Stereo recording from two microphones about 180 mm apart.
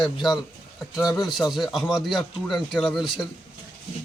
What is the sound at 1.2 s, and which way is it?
Speech, centre (ahead or behind).